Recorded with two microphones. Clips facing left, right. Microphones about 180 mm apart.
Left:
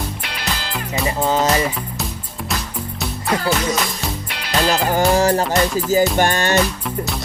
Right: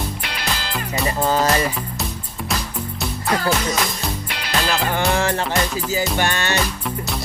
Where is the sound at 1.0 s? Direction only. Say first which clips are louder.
Left 1 dB; 15° left (ahead or behind).